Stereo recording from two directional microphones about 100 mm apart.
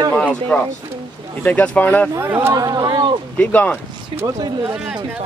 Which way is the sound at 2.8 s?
45° right (ahead or behind).